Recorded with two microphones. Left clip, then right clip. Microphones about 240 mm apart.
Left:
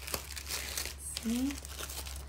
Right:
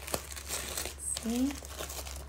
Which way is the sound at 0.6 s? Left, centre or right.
Right.